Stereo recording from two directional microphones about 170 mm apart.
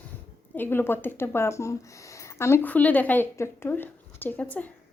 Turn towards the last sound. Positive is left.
turn(degrees=10)  # may be behind; listen again after turning